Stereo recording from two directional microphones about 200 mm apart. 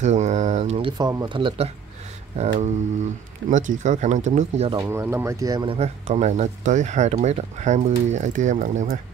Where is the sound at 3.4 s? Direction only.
65° right (ahead or behind).